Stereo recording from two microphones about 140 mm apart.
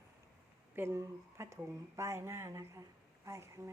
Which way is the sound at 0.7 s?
20° right (ahead or behind).